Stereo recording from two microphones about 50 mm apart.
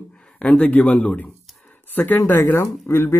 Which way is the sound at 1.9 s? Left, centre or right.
Left.